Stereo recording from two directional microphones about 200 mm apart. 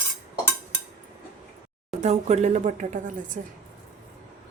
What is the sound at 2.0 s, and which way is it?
Speech, 35° right (ahead or behind).